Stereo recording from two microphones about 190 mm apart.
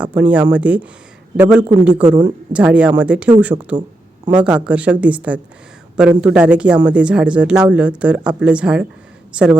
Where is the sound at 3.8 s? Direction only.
25° right (ahead or behind).